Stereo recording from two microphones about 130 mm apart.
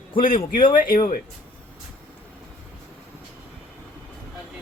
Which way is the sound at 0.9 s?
90° left.